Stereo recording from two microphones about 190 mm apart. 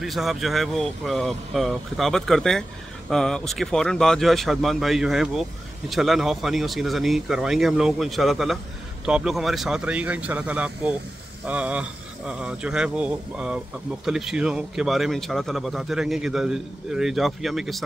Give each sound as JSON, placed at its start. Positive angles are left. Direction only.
{"t": 0.0, "sound": "speech", "side_deg": 0}